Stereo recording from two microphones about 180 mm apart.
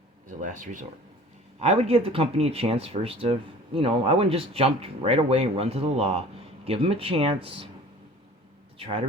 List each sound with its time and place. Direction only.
0.3 s speech: 45° right (ahead or behind)
1.6 s speech: 35° right (ahead or behind)
8.8 s speech: 30° right (ahead or behind)